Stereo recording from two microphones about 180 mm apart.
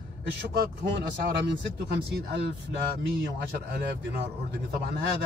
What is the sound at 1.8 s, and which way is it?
Speech, 60° right (ahead or behind).